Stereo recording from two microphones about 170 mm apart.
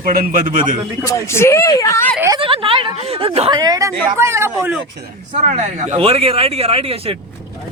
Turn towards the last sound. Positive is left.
turn(degrees=-35)  # may be behind; listen again after turning